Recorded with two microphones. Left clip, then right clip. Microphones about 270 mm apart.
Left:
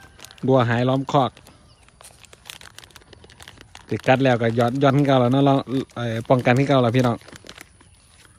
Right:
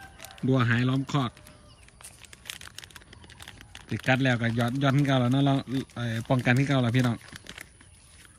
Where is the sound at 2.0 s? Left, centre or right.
Centre.